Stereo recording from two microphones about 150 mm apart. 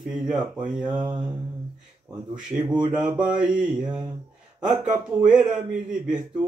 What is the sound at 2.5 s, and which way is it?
Mantra, 5° right (ahead or behind).